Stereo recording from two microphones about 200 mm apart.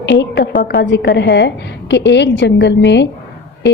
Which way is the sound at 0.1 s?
60° left (ahead or behind).